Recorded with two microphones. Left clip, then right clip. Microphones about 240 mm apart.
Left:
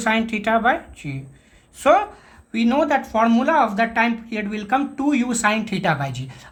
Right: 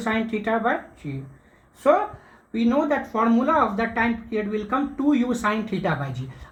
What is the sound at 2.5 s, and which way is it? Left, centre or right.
Speech, left.